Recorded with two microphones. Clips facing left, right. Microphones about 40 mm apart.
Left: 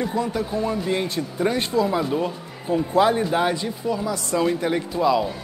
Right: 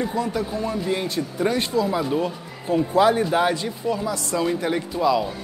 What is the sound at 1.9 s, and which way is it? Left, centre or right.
Speech, centre.